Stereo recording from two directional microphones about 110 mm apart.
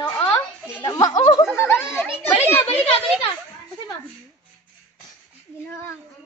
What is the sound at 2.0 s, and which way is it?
Children playing, 20° left (ahead or behind).